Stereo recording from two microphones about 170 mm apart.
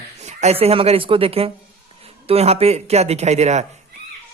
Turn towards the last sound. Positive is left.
turn(degrees=-40)  # may be behind; listen again after turning